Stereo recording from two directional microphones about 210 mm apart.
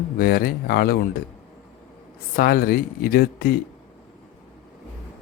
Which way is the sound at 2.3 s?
45° left (ahead or behind).